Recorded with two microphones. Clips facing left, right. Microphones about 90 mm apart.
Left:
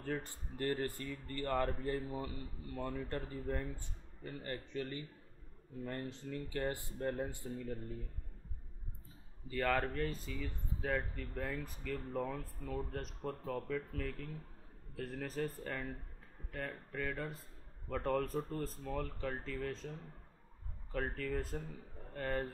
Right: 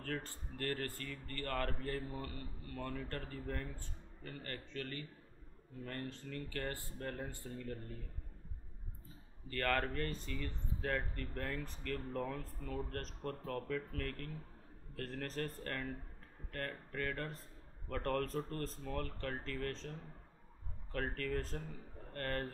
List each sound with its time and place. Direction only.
0.0 s speech: 15° left (ahead or behind)
9.5 s speech: 10° left (ahead or behind)